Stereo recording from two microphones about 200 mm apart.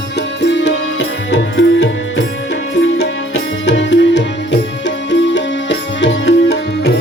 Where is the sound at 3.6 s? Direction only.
65° left (ahead or behind).